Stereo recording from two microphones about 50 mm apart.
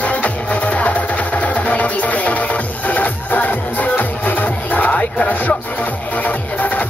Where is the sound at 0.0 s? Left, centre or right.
Left.